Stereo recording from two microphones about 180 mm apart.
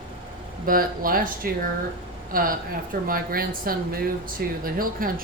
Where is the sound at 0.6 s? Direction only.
50° right (ahead or behind).